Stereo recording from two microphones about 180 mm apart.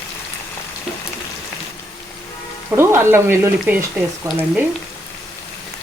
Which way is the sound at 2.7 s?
15° right (ahead or behind).